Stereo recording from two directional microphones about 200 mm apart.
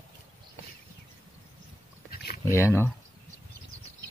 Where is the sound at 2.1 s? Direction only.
50° left (ahead or behind).